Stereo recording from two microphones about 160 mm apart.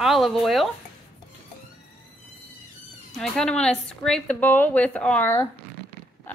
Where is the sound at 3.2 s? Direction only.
5° left (ahead or behind).